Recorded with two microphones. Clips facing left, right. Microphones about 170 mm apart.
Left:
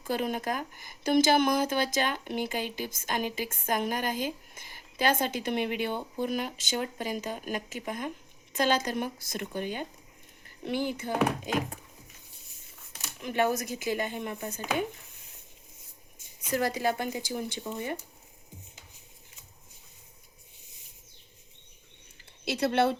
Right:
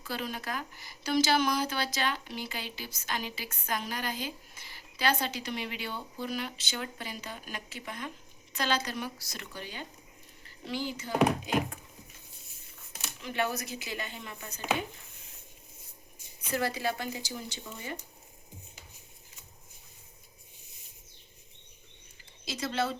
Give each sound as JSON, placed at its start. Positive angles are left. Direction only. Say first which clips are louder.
{"t": 0.0, "sound": "speech", "louder": "left 6 dB", "side_deg": 50}
{"t": 13.2, "sound": "speech", "louder": "left 5 dB", "side_deg": 45}
{"t": 16.5, "sound": "speech", "louder": "left 3 dB", "side_deg": 45}
{"t": 22.4, "sound": "speech", "louder": "left 7 dB", "side_deg": 60}